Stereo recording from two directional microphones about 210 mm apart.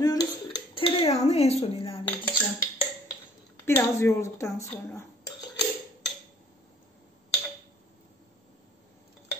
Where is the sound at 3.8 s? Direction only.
15° left (ahead or behind).